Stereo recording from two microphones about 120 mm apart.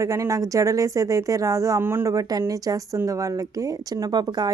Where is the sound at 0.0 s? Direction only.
25° right (ahead or behind).